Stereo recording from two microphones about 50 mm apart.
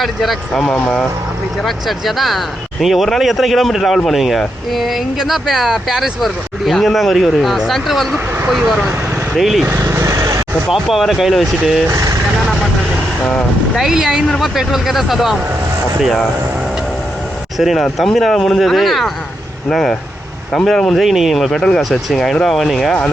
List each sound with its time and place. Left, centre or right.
0.0 s speech: centre
0.7 s speech: left
1.6 s speech: centre
9.3 s speech: centre
9.8 s vehicle: right
10.7 s speech: centre
13.7 s speech: centre
17.6 s speech: centre
21.0 s speech: centre